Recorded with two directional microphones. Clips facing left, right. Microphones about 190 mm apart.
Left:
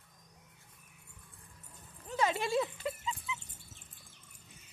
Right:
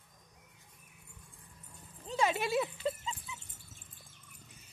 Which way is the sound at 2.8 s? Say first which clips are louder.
Right 2 dB; 30° right (ahead or behind).